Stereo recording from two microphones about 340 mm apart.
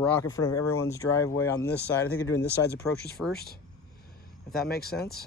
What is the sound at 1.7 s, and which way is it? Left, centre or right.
Speech, left.